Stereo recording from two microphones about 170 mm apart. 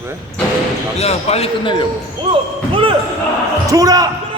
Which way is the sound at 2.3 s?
30° right (ahead or behind).